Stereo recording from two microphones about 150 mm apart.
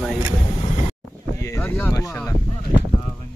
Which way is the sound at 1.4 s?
15° left (ahead or behind).